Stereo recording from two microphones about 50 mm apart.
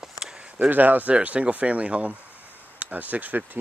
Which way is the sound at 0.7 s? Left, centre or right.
Right.